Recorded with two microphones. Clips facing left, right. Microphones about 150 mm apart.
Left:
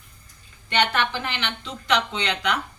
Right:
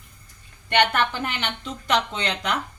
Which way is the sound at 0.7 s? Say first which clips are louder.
Right 2 dB; 50° right (ahead or behind).